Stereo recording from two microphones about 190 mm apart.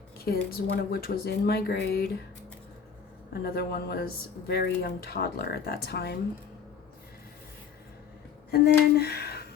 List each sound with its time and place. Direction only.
0.3 s speech: 55° left (ahead or behind)
3.3 s speech: 55° left (ahead or behind)
8.4 s a sound: 55° left (ahead or behind)